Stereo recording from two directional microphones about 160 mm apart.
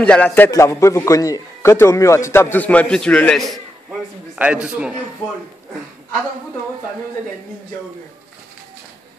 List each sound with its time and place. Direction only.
0.0 s a man's voice: 10° left (ahead or behind)